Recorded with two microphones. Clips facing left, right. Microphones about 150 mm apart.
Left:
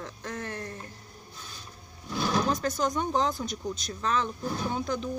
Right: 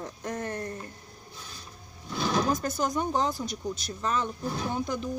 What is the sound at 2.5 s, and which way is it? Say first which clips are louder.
Speech: even; 5° right (ahead or behind).